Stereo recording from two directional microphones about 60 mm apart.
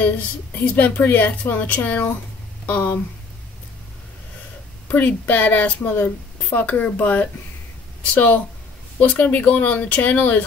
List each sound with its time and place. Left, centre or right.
0.7 s speech: left
4.8 s speech: left